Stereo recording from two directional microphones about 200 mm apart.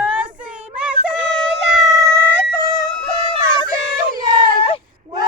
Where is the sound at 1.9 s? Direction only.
15° right (ahead or behind).